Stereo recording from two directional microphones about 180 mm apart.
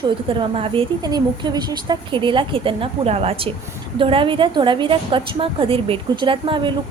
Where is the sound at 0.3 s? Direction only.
30° right (ahead or behind).